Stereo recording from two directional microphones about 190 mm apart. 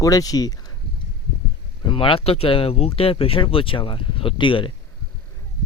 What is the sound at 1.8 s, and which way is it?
Speech, 25° left (ahead or behind).